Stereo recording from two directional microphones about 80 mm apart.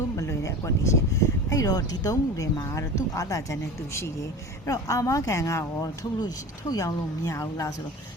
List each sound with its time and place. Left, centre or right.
0.2 s a woman's voice: left
6.1 s a woman's voice: left